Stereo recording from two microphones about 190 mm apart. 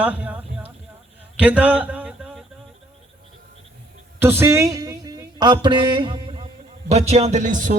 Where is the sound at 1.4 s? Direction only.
10° right (ahead or behind).